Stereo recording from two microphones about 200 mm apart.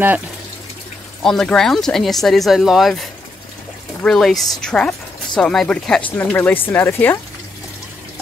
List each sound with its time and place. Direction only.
1.2 s speech: centre (ahead or behind)